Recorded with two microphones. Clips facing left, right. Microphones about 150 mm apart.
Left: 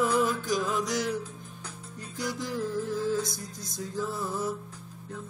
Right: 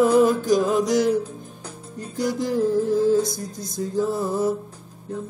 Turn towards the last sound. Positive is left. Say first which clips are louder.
# right 9 dB
turn(degrees=-35)  # may be behind; listen again after turning